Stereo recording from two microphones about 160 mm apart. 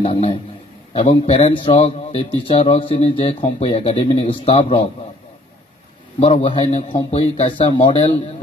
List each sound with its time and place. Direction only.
0.0 s a man's voice: 35° left (ahead or behind)
6.1 s a man's voice: 35° left (ahead or behind)